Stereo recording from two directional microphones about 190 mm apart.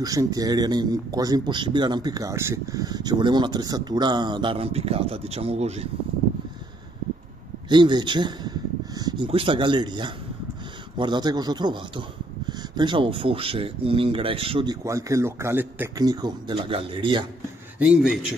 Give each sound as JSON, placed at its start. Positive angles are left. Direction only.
{"t": 0.0, "sound": "speech", "side_deg": -20}
{"t": 7.7, "sound": "a man's voice", "side_deg": -25}
{"t": 17.7, "sound": "speech", "side_deg": -5}